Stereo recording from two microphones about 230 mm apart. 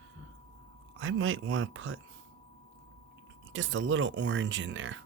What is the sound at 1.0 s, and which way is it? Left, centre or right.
Speech, right.